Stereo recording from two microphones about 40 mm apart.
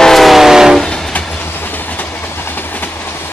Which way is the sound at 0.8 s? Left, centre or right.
Centre.